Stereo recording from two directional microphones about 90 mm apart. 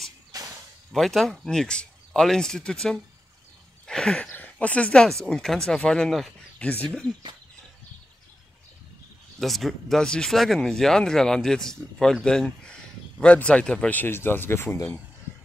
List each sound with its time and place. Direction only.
0.3 s whip: 45° right (ahead or behind)
0.9 s speech: centre (ahead or behind)
3.8 s a sound: 10° left (ahead or behind)
4.3 s speech: 20° left (ahead or behind); by 6.3 s centre (ahead or behind)
6.6 s speech: 15° left (ahead or behind)
9.4 s speech: centre (ahead or behind); by 14.8 s 25° left (ahead or behind)